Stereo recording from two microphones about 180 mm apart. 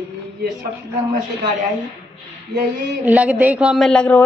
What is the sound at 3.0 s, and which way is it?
A woman's voice, 10° right (ahead or behind).